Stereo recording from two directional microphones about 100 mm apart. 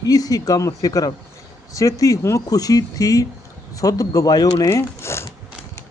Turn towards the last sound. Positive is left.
turn(degrees=25)  # may be behind; listen again after turning